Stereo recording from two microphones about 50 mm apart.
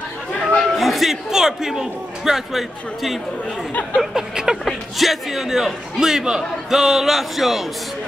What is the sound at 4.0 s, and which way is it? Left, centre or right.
A man's voice, centre.